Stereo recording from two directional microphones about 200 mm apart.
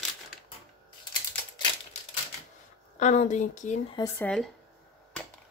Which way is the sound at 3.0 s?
35° left (ahead or behind).